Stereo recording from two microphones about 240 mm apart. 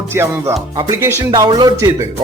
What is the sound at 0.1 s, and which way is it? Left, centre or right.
A man's voice, centre.